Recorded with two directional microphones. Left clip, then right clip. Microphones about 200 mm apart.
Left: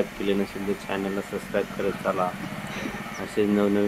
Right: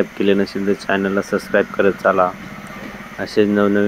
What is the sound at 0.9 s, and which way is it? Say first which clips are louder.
Speech: right 11 dB; 25° right (ahead or behind).